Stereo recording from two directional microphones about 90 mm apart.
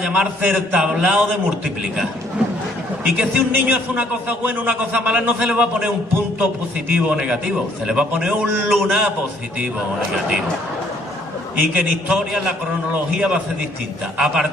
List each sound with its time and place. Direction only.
0.0 s a man's voice: 15° right (ahead or behind)
3.2 s a man's voice: 15° right (ahead or behind)
6.9 s a man's voice: 15° right (ahead or behind)
11.5 s a man's voice: 10° right (ahead or behind)